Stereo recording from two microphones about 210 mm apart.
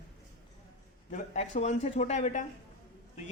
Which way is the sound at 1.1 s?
35° left (ahead or behind).